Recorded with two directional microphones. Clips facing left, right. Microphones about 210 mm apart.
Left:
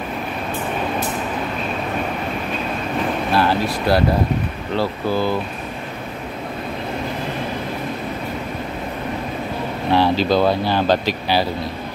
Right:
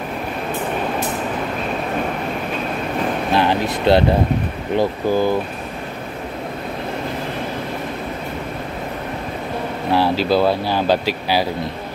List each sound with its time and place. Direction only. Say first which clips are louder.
3.3 s vehicle: right 1 dB; 20° right (ahead or behind)
4.7 s speech: right 3 dB; 15° right (ahead or behind)
9.8 s speech: left 1 dB; 5° right (ahead or behind)